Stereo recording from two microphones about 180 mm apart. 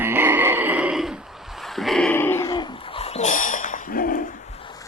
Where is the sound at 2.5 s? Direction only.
25° left (ahead or behind); by 4.2 s 50° left (ahead or behind).